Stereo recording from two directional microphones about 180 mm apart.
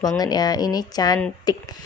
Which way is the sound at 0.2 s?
20° left (ahead or behind).